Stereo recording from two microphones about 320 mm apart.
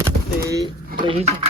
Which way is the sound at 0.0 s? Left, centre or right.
Centre.